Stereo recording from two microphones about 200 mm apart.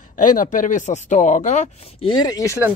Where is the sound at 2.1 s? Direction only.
20° left (ahead or behind).